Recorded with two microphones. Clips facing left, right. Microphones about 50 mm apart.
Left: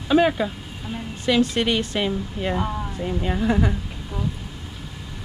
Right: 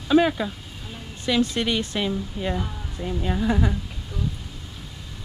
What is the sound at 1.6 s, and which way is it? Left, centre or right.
Speech, left.